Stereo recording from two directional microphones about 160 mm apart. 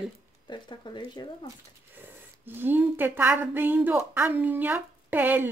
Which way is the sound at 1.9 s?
10° right (ahead or behind).